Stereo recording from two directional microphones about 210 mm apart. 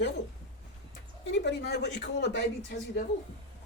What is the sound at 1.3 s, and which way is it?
Speech, 55° left (ahead or behind).